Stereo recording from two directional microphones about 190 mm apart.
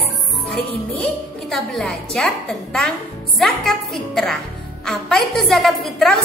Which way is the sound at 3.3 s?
Centre (ahead or behind).